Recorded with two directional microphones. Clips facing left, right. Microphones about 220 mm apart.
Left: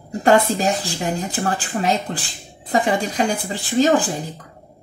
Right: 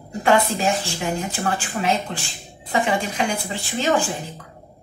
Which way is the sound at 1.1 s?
40° left (ahead or behind).